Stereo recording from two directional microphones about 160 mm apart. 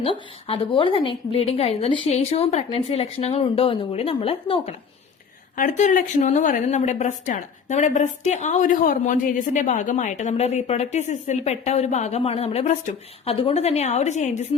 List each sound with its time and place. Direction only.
0.0 s a woman's voice: 35° left (ahead or behind)
5.5 s a woman's voice: 55° left (ahead or behind)